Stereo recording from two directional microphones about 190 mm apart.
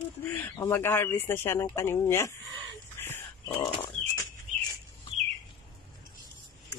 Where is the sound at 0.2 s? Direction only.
10° left (ahead or behind).